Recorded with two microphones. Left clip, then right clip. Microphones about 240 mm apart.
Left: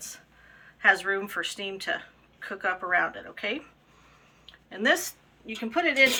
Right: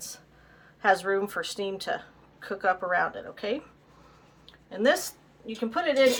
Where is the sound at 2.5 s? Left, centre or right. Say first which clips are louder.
Right 1 dB; right.